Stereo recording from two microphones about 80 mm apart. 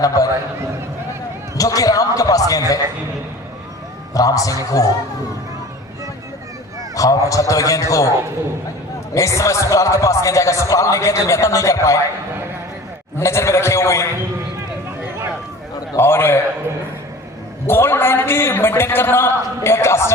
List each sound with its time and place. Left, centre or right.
0.0 s a man's voice: left
1.5 s a man's voice: left
4.1 s a man's voice: left
6.9 s a man's voice: left
9.1 s a man's voice: left
13.1 s a man's voice: left
16.0 s a man's voice: left
17.7 s a man's voice: left